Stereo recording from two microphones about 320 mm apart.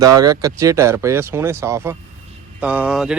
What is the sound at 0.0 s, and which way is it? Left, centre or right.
Speech, centre.